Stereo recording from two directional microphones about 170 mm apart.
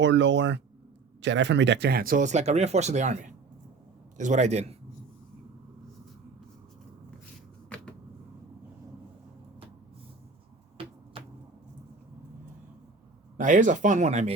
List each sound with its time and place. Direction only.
0.0 s speech: 90° right; by 3.2 s 45° right (ahead or behind)
4.2 s a man's voice: 45° right (ahead or behind)
13.3 s speech: 50° right (ahead or behind)